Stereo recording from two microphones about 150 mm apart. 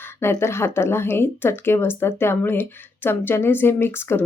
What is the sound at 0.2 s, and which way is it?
Speech, 15° left (ahead or behind).